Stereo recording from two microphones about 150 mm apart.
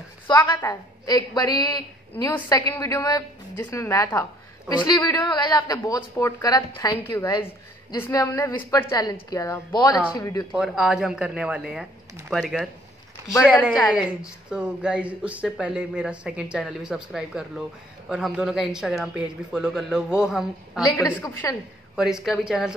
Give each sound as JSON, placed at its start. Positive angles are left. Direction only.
{"t": 0.5, "sound": "a woman's voice", "side_deg": 25}
{"t": 10.5, "sound": "speech", "side_deg": -5}
{"t": 13.7, "sound": "speech", "side_deg": -5}
{"t": 20.8, "sound": "a woman's voice", "side_deg": 20}
{"t": 21.9, "sound": "speech", "side_deg": -5}